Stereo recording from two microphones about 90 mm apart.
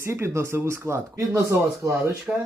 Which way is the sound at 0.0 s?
30° right (ahead or behind).